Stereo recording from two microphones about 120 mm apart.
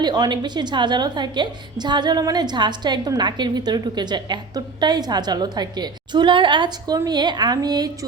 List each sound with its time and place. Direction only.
0.0 s a woman's voice: 35° right (ahead or behind)